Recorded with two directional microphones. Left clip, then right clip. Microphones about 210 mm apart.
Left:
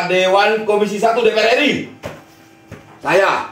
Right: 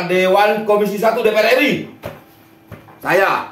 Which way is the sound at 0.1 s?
15° right (ahead or behind).